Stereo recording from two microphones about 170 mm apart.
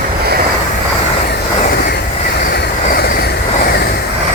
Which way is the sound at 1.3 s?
60° left (ahead or behind).